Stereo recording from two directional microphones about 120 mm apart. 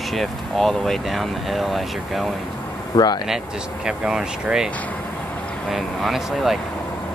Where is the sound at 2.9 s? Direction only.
30° left (ahead or behind).